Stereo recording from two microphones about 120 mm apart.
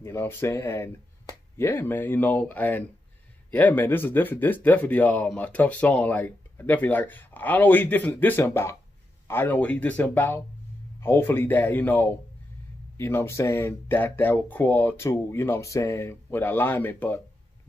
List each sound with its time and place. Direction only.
0.0 s speech: 20° left (ahead or behind)